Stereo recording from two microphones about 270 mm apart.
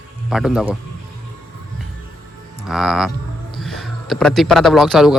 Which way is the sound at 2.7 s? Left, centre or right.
Centre.